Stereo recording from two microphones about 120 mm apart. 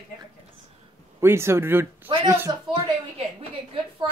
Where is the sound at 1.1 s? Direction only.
20° right (ahead or behind).